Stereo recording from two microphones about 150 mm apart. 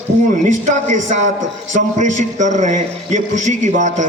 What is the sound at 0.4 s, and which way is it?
A man's voice, 55° right (ahead or behind).